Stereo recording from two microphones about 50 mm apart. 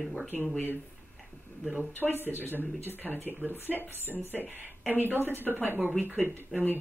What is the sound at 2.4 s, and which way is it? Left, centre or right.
Speech, left.